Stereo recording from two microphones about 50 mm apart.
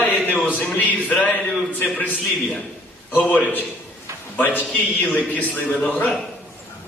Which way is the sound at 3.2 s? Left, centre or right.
Left.